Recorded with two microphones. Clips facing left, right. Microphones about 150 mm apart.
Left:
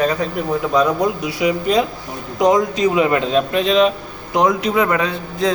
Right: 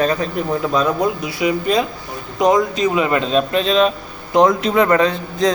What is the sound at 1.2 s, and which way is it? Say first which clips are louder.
A man's voice: even; 15° left (ahead or behind).